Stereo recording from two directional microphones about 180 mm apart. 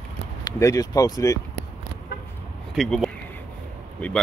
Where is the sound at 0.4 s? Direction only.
20° left (ahead or behind).